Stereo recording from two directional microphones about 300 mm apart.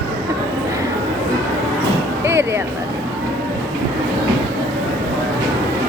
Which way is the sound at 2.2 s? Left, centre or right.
Centre.